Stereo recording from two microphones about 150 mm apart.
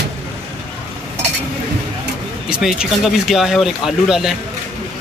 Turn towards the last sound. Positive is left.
turn(degrees=0)  # may be behind; listen again after turning